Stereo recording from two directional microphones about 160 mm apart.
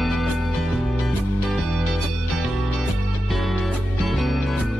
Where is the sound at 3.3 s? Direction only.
Centre (ahead or behind).